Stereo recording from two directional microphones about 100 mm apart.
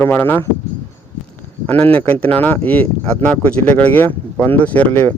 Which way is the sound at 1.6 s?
15° left (ahead or behind).